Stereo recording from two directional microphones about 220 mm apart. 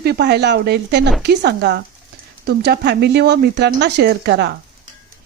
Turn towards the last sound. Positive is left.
turn(degrees=-50)  # may be behind; listen again after turning